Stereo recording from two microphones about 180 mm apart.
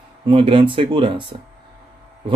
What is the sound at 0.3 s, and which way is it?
Speech, 30° right (ahead or behind).